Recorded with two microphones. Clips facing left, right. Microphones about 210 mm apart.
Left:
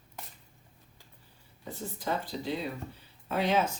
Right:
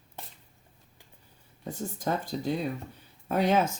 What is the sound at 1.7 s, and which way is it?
Speech, 45° right (ahead or behind).